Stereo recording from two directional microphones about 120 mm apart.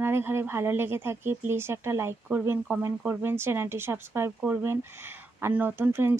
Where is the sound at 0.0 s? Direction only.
20° right (ahead or behind).